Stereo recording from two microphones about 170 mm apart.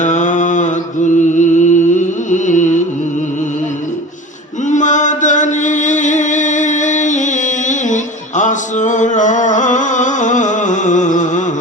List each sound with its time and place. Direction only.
0.0 s mantra: 45° left (ahead or behind)
4.7 s chant: 45° left (ahead or behind)